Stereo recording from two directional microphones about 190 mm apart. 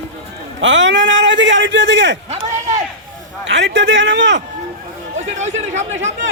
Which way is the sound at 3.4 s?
70° right (ahead or behind).